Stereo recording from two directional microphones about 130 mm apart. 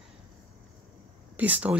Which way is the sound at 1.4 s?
10° right (ahead or behind).